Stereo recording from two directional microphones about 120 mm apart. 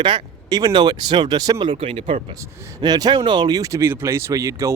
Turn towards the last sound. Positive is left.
turn(degrees=-25)  # may be behind; listen again after turning